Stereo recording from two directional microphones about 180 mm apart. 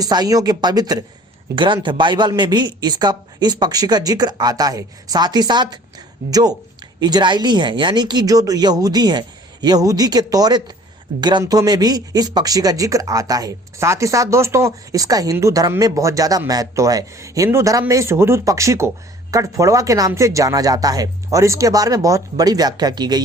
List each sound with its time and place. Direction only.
0.0 s speech: 20° right (ahead or behind)